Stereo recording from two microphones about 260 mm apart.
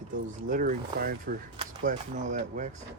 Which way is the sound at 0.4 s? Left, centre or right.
Right.